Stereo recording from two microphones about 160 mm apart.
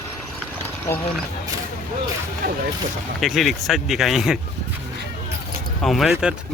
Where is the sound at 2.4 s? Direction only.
75° right (ahead or behind).